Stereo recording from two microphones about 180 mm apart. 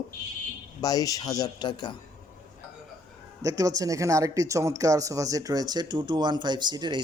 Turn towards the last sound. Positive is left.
turn(degrees=-25)  # may be behind; listen again after turning